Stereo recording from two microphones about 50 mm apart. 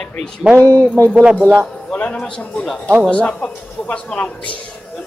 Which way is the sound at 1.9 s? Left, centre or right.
Left.